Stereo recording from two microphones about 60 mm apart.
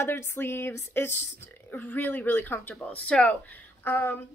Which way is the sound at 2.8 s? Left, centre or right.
Centre.